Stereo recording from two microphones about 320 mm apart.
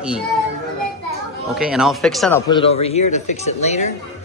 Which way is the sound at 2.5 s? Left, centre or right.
Centre.